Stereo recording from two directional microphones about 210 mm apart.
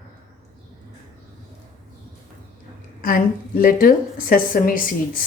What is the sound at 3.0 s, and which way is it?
A woman's voice, 40° left (ahead or behind).